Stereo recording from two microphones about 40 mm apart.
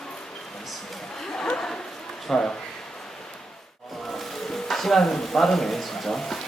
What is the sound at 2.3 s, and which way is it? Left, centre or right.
Speech, left.